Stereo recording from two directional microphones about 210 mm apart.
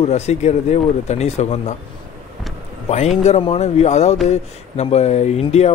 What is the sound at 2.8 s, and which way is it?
Speech, 30° left (ahead or behind).